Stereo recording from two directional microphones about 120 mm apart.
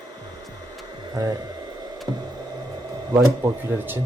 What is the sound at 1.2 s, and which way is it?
Speech, 30° right (ahead or behind).